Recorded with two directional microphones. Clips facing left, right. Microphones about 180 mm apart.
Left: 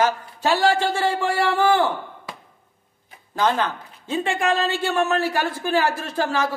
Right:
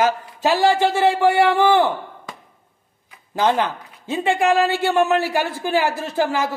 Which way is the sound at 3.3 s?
15° right (ahead or behind).